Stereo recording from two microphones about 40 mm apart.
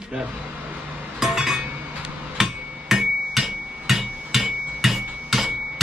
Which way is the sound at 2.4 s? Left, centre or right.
Centre.